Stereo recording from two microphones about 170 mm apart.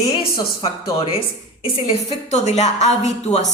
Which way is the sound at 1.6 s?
35° left (ahead or behind).